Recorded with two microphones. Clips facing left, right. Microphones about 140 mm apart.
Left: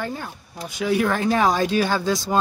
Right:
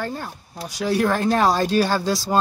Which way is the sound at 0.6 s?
40° right (ahead or behind).